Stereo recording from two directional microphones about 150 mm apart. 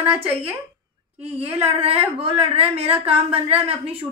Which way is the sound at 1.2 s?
40° right (ahead or behind).